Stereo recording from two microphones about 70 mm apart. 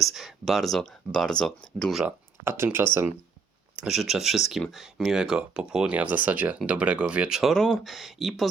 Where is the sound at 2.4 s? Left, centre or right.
Right.